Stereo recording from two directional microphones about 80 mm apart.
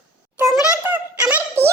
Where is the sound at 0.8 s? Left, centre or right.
Right.